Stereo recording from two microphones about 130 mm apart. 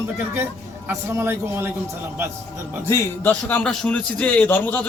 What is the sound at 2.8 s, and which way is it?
Speech, 20° left (ahead or behind).